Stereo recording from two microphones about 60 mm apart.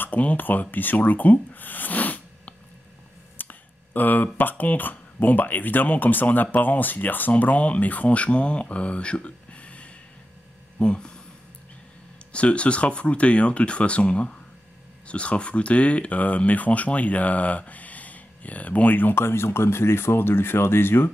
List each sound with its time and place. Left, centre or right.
0.0 s speech: left
3.3 s a sound: left
4.4 s speech: left; by 11.1 s centre
12.3 s speech: centre; by 21.1 s left